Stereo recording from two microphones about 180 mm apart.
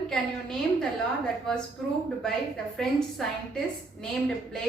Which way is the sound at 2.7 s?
Centre (ahead or behind).